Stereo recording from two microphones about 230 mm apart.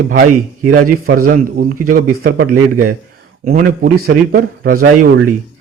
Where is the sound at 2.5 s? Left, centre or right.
Right.